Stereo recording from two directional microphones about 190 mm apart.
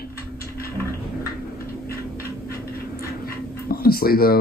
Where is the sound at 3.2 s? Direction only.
50° left (ahead or behind).